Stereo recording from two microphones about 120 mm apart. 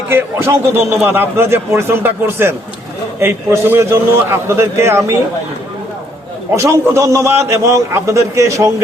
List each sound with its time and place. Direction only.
0.1 s a man's voice: 20° right (ahead or behind)
6.6 s a man's voice: 25° right (ahead or behind)